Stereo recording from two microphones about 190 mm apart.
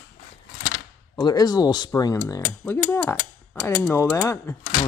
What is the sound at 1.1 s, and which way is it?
Speech, 20° left (ahead or behind).